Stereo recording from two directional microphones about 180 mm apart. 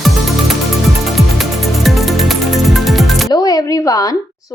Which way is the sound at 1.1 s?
Centre (ahead or behind).